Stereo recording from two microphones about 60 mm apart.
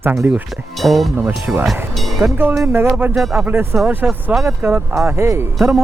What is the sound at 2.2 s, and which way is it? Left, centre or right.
Speech, right.